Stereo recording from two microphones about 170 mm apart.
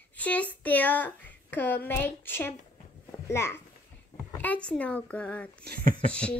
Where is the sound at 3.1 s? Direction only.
15° left (ahead or behind).